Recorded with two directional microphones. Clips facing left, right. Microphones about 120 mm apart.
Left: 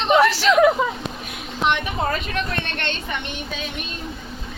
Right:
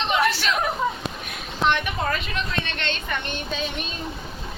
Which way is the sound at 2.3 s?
55° left (ahead or behind).